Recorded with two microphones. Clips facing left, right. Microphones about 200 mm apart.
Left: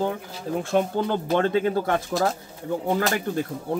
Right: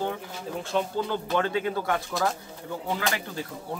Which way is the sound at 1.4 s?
40° left (ahead or behind).